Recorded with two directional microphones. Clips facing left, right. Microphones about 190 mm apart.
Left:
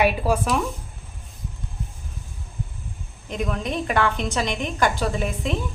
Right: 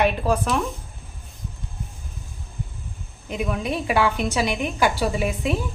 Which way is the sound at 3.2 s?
5° right (ahead or behind).